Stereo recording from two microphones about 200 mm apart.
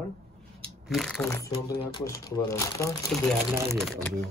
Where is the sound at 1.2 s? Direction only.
15° left (ahead or behind).